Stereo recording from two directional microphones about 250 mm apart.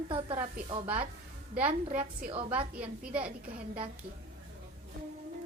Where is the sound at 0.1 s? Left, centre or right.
Right.